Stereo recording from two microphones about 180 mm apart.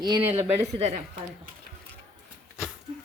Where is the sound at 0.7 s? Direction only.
35° right (ahead or behind).